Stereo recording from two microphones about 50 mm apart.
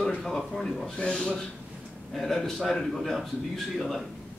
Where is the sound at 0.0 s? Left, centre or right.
Centre.